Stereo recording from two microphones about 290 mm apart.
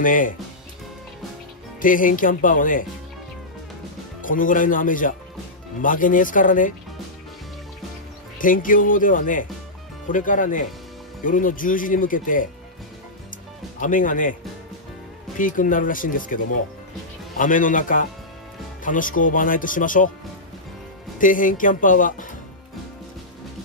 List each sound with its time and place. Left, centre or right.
0.0 s speech: left
1.8 s speech: left
4.2 s speech: left
8.4 s speech: left
13.7 s speech: left
15.3 s speech: left
17.4 s speech: left
21.2 s speech: left